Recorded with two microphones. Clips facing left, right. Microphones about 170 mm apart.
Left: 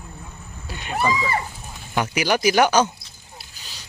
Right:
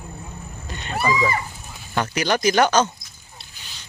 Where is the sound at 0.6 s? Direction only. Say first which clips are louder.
Left 2 dB; 10° left (ahead or behind).